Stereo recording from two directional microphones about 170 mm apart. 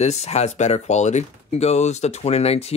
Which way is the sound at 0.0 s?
40° left (ahead or behind).